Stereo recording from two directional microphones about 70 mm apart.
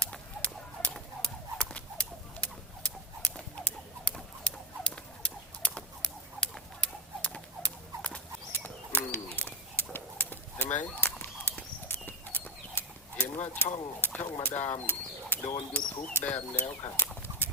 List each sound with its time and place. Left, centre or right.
0.0 s bird: centre
1.2 s a sound: centre
8.5 s bird: left
11.9 s clip-clop: left
14.4 s speech: left
15.7 s speech: centre